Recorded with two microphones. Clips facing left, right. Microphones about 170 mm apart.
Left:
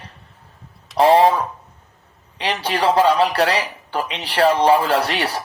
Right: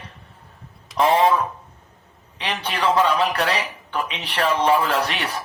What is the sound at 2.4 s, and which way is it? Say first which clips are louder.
Speech: left 4 dB; 35° left (ahead or behind).